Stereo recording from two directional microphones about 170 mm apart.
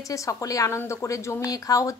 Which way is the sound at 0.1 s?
20° left (ahead or behind).